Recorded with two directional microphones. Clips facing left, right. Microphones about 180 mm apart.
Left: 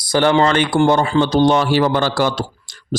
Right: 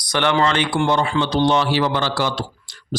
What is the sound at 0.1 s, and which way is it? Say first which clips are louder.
A man's voice: left 4 dB; 35° left (ahead or behind).